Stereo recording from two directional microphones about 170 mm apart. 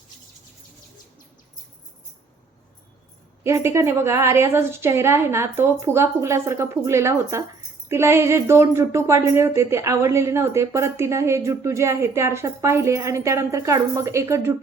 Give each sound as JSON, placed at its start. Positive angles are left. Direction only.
{"t": 3.4, "sound": "speech", "side_deg": -15}